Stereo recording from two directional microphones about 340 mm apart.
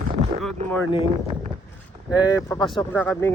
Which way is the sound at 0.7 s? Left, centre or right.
Centre.